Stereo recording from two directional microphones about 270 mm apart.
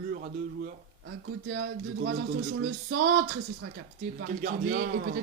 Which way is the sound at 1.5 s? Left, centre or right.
Right.